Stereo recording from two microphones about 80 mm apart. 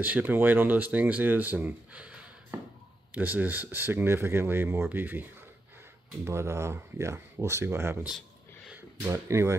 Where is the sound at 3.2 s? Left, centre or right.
Right.